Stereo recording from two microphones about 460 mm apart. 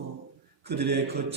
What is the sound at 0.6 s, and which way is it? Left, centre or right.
Speech, right.